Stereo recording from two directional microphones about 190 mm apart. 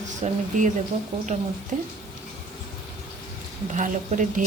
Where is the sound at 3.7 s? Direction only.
40° right (ahead or behind).